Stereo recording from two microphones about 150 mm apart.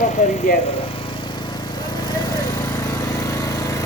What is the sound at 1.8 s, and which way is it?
Lawn mower, 30° left (ahead or behind).